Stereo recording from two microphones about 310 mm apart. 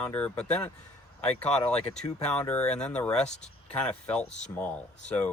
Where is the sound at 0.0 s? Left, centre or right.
Centre.